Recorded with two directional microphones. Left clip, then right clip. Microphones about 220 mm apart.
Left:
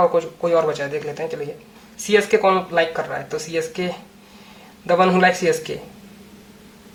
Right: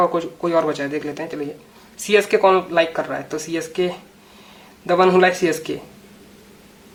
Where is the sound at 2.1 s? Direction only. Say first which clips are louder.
Right 1 dB; 40° right (ahead or behind).